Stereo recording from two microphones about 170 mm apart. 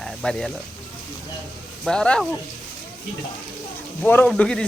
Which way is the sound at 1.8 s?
5° left (ahead or behind).